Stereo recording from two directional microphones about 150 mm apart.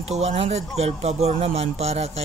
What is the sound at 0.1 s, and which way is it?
Speech, 45° right (ahead or behind).